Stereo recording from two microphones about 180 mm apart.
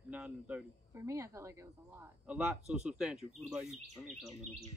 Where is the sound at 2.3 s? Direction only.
5° right (ahead or behind).